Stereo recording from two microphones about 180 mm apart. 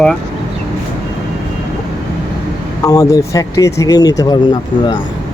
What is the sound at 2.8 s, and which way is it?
Speech, 20° left (ahead or behind).